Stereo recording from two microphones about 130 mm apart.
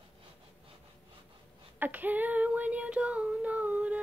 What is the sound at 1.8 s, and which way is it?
Child singing, 15° right (ahead or behind).